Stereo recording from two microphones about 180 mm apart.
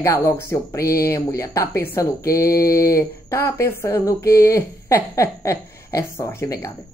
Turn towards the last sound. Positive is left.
turn(degrees=15)  # may be behind; listen again after turning